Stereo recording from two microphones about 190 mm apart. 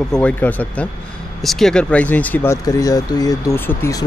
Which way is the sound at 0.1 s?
5° left (ahead or behind).